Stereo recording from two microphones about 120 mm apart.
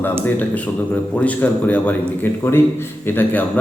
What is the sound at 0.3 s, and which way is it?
A man's voice, 15° left (ahead or behind).